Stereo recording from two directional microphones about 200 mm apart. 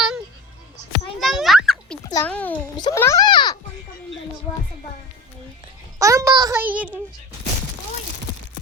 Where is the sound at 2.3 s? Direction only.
5° left (ahead or behind).